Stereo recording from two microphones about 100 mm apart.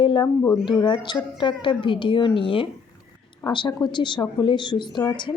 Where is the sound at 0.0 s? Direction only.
55° left (ahead or behind).